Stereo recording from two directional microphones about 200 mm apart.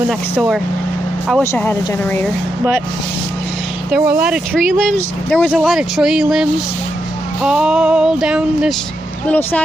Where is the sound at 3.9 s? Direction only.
5° right (ahead or behind).